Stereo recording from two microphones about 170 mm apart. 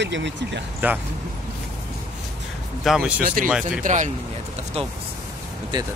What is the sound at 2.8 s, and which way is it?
Speech, centre (ahead or behind).